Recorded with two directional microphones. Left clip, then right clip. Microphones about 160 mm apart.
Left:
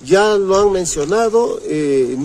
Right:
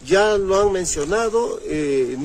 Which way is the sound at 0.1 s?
Centre (ahead or behind).